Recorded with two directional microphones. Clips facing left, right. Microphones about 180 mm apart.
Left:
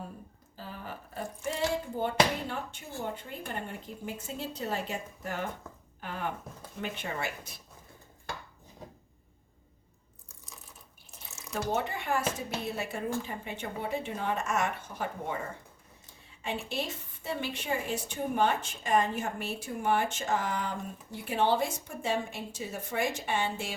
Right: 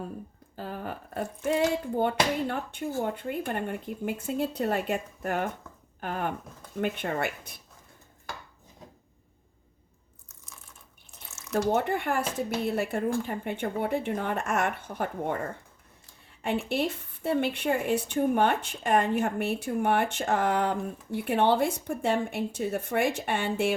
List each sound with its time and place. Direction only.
0.5 s a sound: 55° right (ahead or behind)
2.5 s a woman's voice: 55° right (ahead or behind)
11.5 s a woman's voice: 60° right (ahead or behind)
16.4 s a woman's voice: 60° right (ahead or behind)